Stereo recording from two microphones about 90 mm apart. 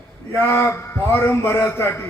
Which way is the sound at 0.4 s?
25° left (ahead or behind).